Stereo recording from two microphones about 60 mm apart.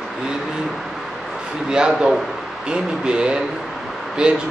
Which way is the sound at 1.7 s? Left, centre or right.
Centre.